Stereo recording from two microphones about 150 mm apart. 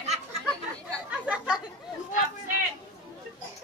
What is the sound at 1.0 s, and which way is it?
Chatter, 5° right (ahead or behind).